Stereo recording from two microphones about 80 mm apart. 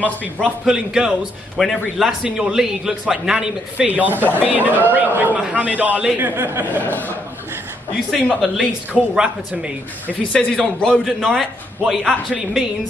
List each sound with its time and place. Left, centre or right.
0.4 s a man's voice: centre
3.7 s a man's voice: centre
6.8 s speech: left
8.4 s speech: centre
10.3 s a man's voice: centre